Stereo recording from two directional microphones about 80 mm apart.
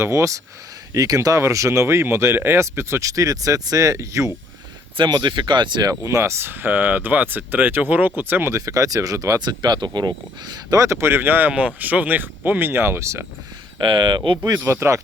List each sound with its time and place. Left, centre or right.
0.0 s speech: right
4.9 s speech: right
5.9 s speech: right
8.5 s speech: right
9.4 s speech: right
10.8 s speech: right
13.7 s speech: right
14.6 s speech: right